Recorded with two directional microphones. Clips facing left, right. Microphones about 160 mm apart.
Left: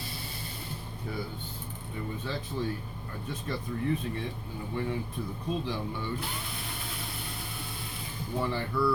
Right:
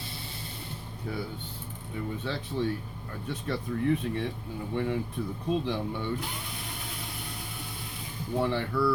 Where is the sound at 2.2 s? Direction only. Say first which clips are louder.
Right 3 dB; 70° right (ahead or behind).